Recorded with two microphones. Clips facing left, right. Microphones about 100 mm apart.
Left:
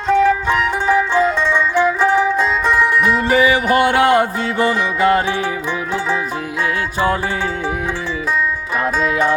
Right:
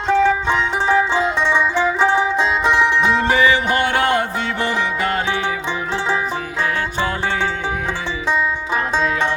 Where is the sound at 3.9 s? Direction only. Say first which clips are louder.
Left 5 dB; 35° left (ahead or behind).